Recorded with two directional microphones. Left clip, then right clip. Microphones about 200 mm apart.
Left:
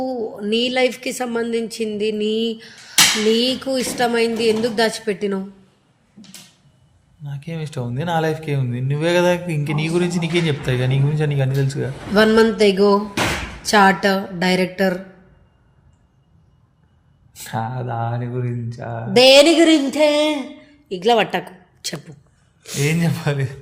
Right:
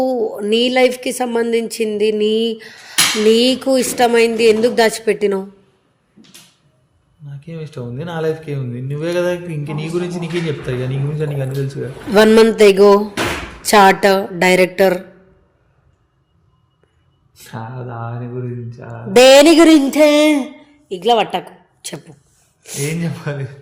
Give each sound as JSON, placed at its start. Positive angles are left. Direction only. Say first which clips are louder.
{"t": 0.0, "sound": "a woman's voice", "louder": "right 7 dB", "side_deg": -50}
{"t": 7.3, "sound": "speech", "louder": "left 1 dB", "side_deg": 25}
{"t": 12.1, "sound": "a woman's voice", "louder": "right 5 dB", "side_deg": -50}
{"t": 17.3, "sound": "speech", "louder": "left 5 dB", "side_deg": 25}
{"t": 19.1, "sound": "a woman's voice", "louder": "right 4 dB", "side_deg": -40}
{"t": 20.8, "sound": "a woman's voice", "louder": "right 2 dB", "side_deg": -10}
{"t": 21.3, "sound": "a sound", "louder": "right 2 dB", "side_deg": 0}
{"t": 22.6, "sound": "speech", "louder": "left 1 dB", "side_deg": -5}
{"t": 22.9, "sound": "speech", "louder": "left 5 dB", "side_deg": 35}